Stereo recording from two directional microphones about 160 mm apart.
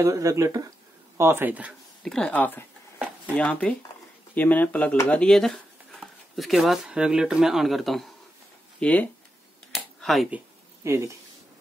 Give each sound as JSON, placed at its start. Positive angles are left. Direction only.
{"t": 0.0, "sound": "speech", "side_deg": -20}
{"t": 2.0, "sound": "speech", "side_deg": 5}
{"t": 9.7, "sound": "a sound", "side_deg": 5}
{"t": 10.8, "sound": "speech", "side_deg": -20}